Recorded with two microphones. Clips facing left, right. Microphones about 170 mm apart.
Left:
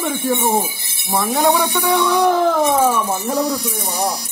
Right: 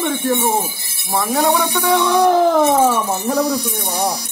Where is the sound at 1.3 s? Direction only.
20° left (ahead or behind).